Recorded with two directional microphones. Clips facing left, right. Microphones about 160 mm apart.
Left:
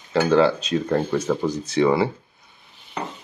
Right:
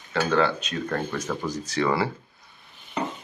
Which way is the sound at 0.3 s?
30° left (ahead or behind).